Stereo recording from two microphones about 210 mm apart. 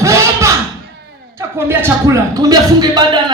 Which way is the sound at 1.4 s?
10° right (ahead or behind).